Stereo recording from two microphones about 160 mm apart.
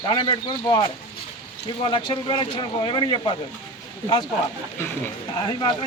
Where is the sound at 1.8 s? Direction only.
30° left (ahead or behind).